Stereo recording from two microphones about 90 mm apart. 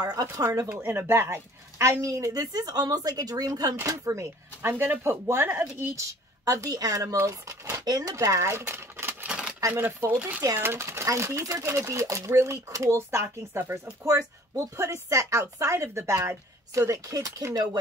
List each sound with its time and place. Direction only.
0.0 s speech: 45° right (ahead or behind)
0.7 s speech: 25° right (ahead or behind); by 3.7 s 45° right (ahead or behind)
3.7 s speech: 35° right (ahead or behind)
6.4 s speech: 40° right (ahead or behind); by 9.3 s 25° right (ahead or behind)
9.3 s a sound: 10° right (ahead or behind)
9.7 s speech: 25° right (ahead or behind)
10.6 s speech: 30° right (ahead or behind)